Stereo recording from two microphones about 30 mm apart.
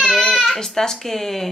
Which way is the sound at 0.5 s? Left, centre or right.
Centre.